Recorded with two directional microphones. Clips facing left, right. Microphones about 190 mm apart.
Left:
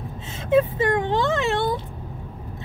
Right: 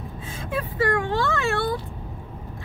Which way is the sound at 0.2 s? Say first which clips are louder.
Left 11 dB; 25° left (ahead or behind).